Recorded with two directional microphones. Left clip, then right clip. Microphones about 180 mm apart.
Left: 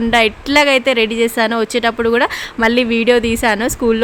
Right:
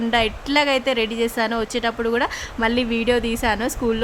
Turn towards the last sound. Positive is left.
turn(degrees=20)  # may be behind; listen again after turning